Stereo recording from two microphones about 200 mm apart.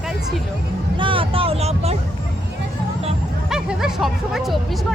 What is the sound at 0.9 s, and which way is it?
Speech, 25° right (ahead or behind).